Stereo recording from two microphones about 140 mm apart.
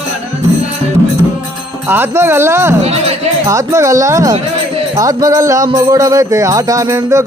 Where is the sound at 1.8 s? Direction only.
15° right (ahead or behind).